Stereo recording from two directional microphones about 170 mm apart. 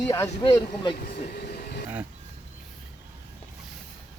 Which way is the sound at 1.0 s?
65° left (ahead or behind).